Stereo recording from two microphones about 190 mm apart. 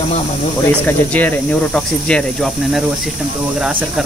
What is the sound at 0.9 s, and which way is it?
Speech, 10° left (ahead or behind).